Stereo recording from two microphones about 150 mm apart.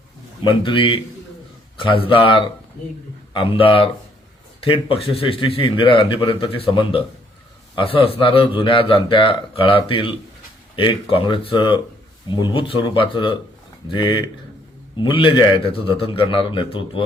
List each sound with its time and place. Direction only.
0.4 s a man's voice: 35° left (ahead or behind)